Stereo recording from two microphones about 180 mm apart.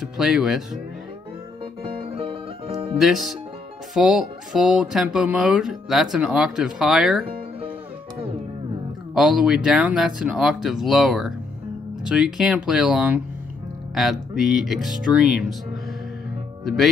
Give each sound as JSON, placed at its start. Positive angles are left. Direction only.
{"t": 0.0, "sound": "speech", "side_deg": 0}
{"t": 1.8, "sound": "music", "side_deg": -30}
{"t": 3.0, "sound": "speech", "side_deg": 0}
{"t": 9.1, "sound": "speech", "side_deg": -5}
{"t": 16.6, "sound": "speech", "side_deg": 0}